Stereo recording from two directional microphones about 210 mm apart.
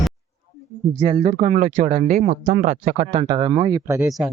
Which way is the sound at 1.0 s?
25° right (ahead or behind).